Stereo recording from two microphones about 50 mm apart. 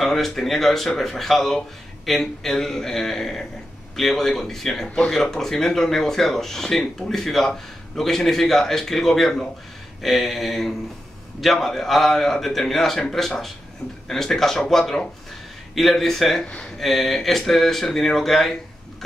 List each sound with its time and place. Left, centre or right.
0.0 s speech: centre
4.8 s speech: left
5.1 s speech: centre
14.0 s speech: centre